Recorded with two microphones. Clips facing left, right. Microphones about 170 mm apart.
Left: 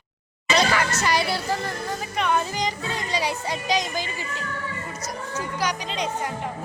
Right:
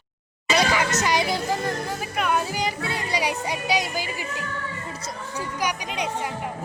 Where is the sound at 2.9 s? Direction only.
10° right (ahead or behind).